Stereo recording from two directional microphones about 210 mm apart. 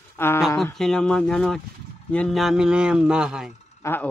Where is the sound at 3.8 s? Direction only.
10° left (ahead or behind).